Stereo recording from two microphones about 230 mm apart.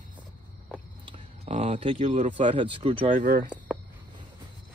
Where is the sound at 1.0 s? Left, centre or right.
Right.